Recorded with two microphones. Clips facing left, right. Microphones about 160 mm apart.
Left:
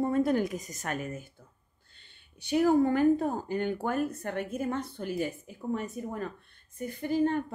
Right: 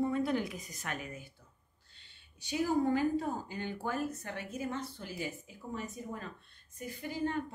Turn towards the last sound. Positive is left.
turn(degrees=55)  # may be behind; listen again after turning